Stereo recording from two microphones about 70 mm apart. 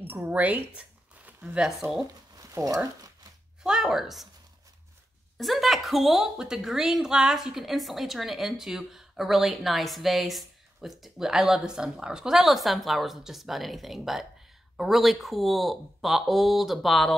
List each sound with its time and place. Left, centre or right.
0.0 s a sound: right
1.6 s a woman's voice: centre
2.3 s speech: right
3.6 s a woman's voice: centre
5.4 s a woman's voice: centre